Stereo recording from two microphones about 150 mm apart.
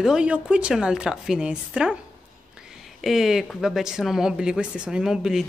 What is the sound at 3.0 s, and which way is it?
Speech, centre (ahead or behind).